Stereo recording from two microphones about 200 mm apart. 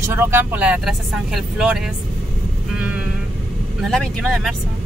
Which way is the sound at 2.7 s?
5° right (ahead or behind).